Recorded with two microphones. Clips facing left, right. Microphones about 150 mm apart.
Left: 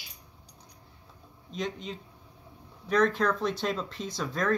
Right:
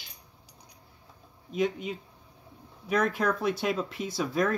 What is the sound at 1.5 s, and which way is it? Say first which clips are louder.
Speech: right 6 dB; 10° right (ahead or behind).